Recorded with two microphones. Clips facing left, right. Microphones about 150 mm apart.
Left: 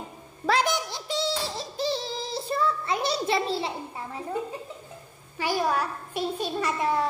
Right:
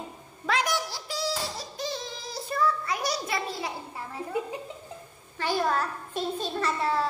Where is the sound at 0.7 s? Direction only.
20° left (ahead or behind).